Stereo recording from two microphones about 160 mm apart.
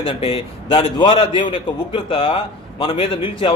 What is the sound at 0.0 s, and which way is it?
A man's voice, 35° left (ahead or behind).